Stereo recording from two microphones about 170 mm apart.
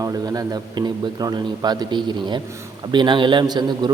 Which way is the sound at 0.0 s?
20° right (ahead or behind).